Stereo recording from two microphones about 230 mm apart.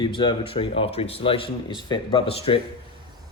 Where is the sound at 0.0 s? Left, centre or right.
Centre.